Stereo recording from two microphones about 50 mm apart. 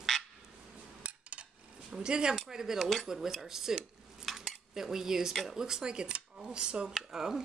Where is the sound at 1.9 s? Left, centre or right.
Centre.